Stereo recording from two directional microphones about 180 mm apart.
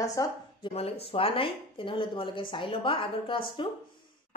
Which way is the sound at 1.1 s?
30° left (ahead or behind).